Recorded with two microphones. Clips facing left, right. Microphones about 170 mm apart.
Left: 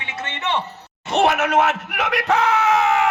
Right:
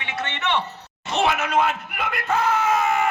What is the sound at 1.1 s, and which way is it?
Speech, 60° left (ahead or behind).